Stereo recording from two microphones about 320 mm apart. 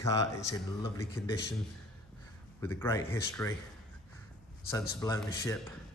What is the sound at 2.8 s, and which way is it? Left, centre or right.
Speech, centre.